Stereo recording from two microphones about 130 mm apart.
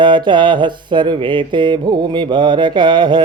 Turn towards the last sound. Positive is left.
turn(degrees=-35)  # may be behind; listen again after turning